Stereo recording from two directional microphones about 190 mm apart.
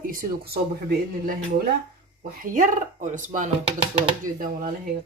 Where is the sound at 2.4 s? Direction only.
45° right (ahead or behind).